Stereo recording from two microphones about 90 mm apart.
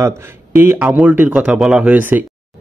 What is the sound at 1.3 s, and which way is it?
Speech, 5° right (ahead or behind).